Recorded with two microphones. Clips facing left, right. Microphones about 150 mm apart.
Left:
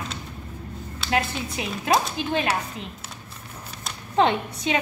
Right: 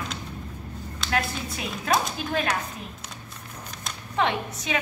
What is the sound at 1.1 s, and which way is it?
Speech, 20° left (ahead or behind).